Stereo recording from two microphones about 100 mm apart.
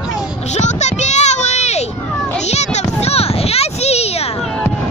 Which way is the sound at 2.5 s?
90° left.